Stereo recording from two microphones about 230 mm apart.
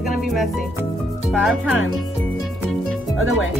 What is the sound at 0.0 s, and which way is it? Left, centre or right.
Speech, centre.